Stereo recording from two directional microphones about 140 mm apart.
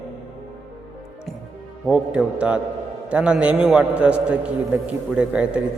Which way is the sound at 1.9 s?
10° right (ahead or behind).